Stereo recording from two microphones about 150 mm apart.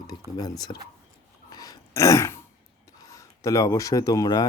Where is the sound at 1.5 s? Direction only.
25° left (ahead or behind).